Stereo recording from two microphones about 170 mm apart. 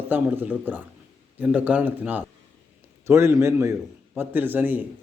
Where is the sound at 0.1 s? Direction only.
10° right (ahead or behind).